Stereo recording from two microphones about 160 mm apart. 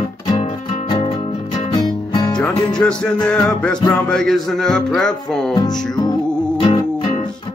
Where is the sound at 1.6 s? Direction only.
30° left (ahead or behind).